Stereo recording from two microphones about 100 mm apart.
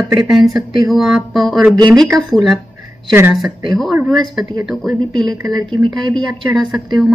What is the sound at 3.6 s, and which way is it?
A woman's voice, centre (ahead or behind).